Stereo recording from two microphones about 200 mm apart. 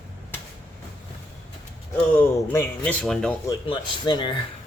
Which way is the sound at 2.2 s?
10° left (ahead or behind).